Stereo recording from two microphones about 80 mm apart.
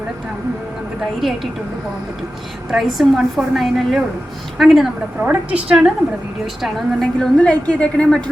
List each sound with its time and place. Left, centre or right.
2.7 s a woman's voice: centre
5.2 s a woman's voice: centre
6.6 s a woman's voice: centre